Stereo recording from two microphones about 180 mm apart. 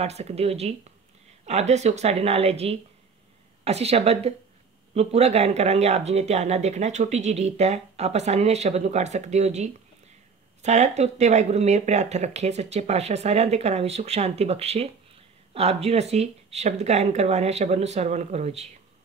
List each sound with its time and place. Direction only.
0.0 s speech: 35° right (ahead or behind)